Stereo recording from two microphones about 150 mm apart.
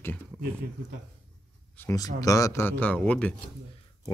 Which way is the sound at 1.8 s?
20° left (ahead or behind).